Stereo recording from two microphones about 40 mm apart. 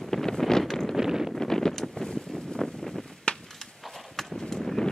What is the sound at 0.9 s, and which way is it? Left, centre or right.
Wind noise, centre.